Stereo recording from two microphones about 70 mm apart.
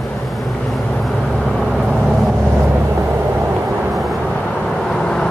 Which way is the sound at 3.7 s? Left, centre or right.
Centre.